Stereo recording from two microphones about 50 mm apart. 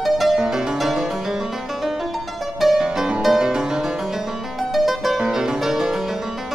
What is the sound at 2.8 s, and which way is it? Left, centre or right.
Music, centre.